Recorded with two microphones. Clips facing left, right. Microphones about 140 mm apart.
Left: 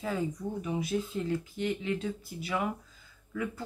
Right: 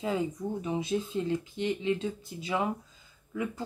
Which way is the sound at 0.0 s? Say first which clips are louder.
Right 2 dB; 20° right (ahead or behind).